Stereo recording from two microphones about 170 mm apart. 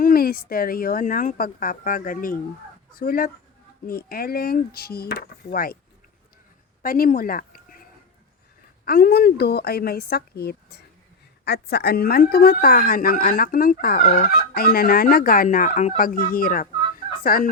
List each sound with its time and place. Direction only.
0.0 s a woman's voice: 60° left (ahead or behind)
6.8 s speech: 55° left (ahead or behind)
8.8 s a woman's voice: 60° left (ahead or behind)